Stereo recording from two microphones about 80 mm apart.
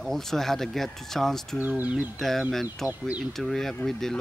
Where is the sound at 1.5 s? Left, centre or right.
Right.